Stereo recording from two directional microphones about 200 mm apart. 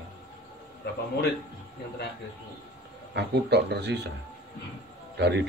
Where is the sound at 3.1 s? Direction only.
55° right (ahead or behind).